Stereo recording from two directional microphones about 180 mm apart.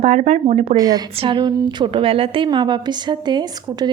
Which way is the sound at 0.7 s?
20° right (ahead or behind).